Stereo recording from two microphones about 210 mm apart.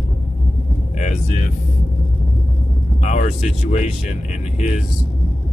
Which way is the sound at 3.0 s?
35° left (ahead or behind).